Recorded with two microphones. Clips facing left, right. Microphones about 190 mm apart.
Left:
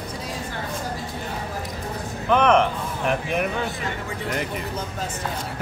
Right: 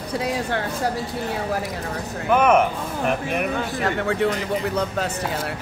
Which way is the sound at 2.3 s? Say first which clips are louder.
Right 1 dB; 5° right (ahead or behind).